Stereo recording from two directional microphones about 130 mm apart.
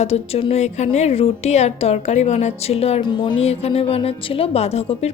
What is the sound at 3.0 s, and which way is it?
Speech, 35° left (ahead or behind).